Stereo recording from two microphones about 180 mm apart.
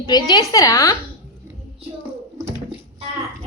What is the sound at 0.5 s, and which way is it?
Speech, 20° left (ahead or behind).